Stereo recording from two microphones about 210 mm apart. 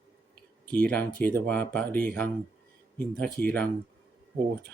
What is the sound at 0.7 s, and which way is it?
Speech, 5° left (ahead or behind).